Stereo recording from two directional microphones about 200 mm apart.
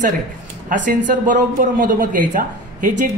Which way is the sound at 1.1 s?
40° right (ahead or behind).